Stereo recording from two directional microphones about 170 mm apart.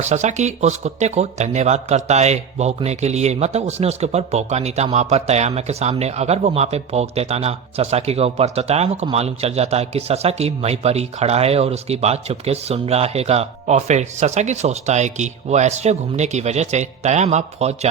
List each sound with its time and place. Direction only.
0.0 s speech: 45° right (ahead or behind)